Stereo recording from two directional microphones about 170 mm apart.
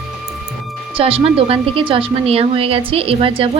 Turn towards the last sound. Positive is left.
turn(degrees=-30)  # may be behind; listen again after turning